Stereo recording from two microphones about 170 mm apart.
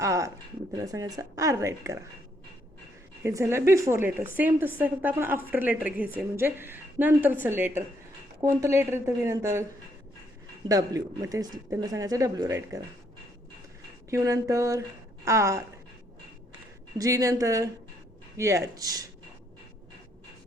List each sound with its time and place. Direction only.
0.0 s a sound: 20° right (ahead or behind)
0.7 s speech: 20° right (ahead or behind)
3.2 s a woman's voice: 15° right (ahead or behind)
10.7 s speech: 20° right (ahead or behind)
14.1 s a woman's voice: 15° right (ahead or behind)
17.0 s speech: 20° right (ahead or behind)